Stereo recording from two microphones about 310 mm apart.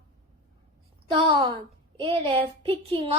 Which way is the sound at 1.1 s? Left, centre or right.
Centre.